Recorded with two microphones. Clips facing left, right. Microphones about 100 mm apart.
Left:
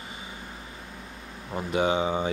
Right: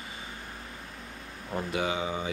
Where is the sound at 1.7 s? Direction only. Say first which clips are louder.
Left 7 dB; 25° left (ahead or behind).